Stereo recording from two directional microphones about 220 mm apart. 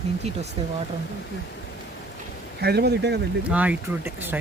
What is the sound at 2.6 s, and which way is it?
Speech, 45° right (ahead or behind).